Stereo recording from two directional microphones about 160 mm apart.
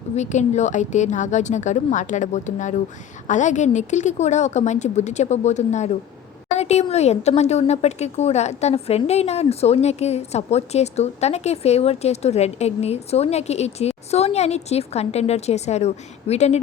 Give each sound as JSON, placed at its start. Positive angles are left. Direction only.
{"t": 0.2, "sound": "a woman's voice", "side_deg": 45}